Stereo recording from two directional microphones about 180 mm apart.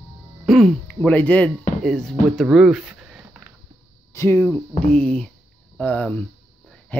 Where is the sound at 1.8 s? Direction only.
Centre (ahead or behind).